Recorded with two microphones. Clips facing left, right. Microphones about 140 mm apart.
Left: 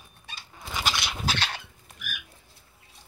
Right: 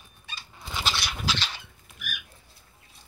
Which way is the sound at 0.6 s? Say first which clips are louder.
Left 1 dB; 10° left (ahead or behind).